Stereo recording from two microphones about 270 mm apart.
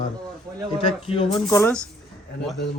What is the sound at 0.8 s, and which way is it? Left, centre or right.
A man's voice, centre.